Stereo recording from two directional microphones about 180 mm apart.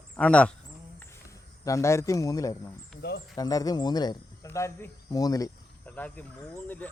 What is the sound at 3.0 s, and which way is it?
Speech, 65° left (ahead or behind).